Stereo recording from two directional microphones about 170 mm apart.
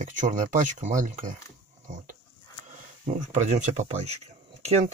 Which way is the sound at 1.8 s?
45° right (ahead or behind).